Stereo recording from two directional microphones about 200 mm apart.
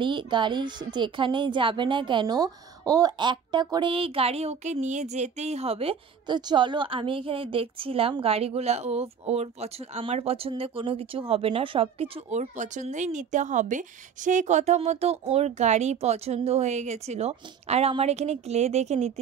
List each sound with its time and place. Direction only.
0.0 s a woman's voice: 25° right (ahead or behind)